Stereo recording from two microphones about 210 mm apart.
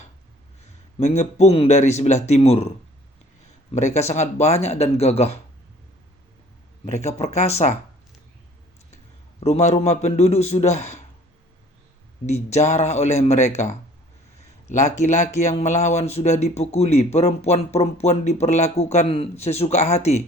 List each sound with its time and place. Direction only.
0.9 s speech: 30° left (ahead or behind)
3.8 s speech: 35° left (ahead or behind)
6.8 s speech: 30° left (ahead or behind)
9.4 s speech: 30° left (ahead or behind)
12.2 s speech: 30° left (ahead or behind)